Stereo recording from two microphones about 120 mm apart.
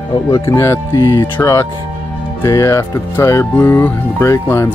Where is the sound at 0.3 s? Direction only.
25° left (ahead or behind).